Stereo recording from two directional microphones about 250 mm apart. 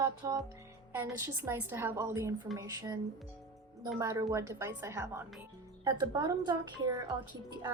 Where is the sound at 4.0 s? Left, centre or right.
Centre.